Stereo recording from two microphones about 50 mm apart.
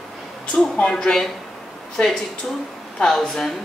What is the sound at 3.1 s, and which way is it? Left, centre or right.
Speech, centre.